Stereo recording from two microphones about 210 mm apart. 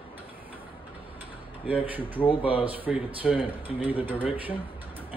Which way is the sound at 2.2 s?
25° left (ahead or behind).